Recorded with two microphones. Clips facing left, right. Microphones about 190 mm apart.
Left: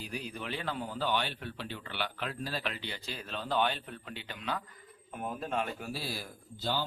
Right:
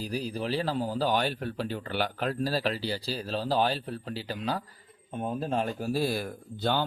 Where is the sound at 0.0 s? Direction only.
35° right (ahead or behind).